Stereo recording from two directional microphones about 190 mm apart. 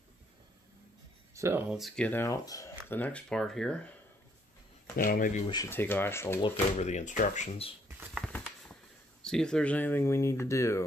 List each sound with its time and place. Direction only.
1.3 s a sound: 15° right (ahead or behind)
1.7 s speech: centre (ahead or behind)
4.9 s speech: 50° left (ahead or behind)
5.5 s speech: 15° left (ahead or behind)
6.8 s speech: 35° left (ahead or behind)
8.2 s a sound: 5° left (ahead or behind)
9.2 s speech: 5° left (ahead or behind)